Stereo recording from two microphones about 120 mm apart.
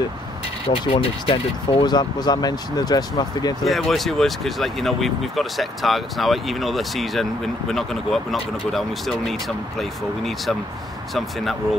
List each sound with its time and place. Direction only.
0.7 s speech: 50° left (ahead or behind)
3.6 s speech: centre (ahead or behind)